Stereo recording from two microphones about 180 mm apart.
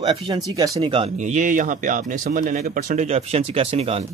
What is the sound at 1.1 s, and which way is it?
Speech, 40° right (ahead or behind).